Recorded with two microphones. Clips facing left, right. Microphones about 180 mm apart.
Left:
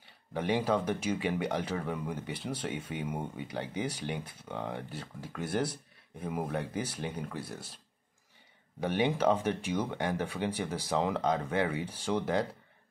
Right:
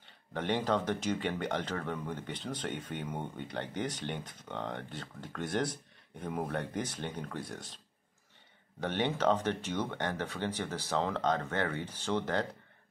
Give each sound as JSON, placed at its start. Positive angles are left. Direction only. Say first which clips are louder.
{"t": 0.0, "sound": "speech", "louder": "left 2 dB", "side_deg": 10}
{"t": 8.8, "sound": "speech", "louder": "left 2 dB", "side_deg": 10}